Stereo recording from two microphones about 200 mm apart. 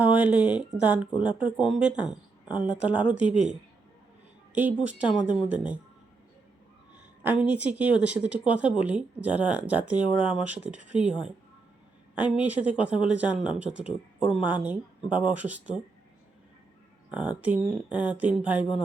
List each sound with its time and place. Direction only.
0.0 s speech: 10° right (ahead or behind)
4.5 s speech: 10° right (ahead or behind)
7.2 s speech: 10° right (ahead or behind)
17.1 s speech: 5° right (ahead or behind)